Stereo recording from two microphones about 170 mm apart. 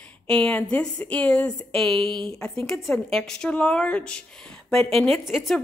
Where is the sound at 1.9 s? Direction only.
30° right (ahead or behind).